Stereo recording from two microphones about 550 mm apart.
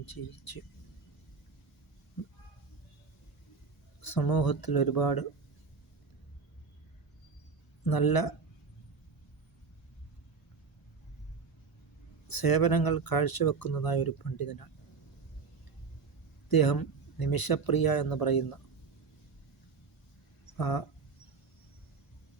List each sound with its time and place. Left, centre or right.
0.0 s speech: left
4.0 s speech: left
7.9 s speech: left
12.3 s speech: left
16.5 s speech: left
20.6 s speech: left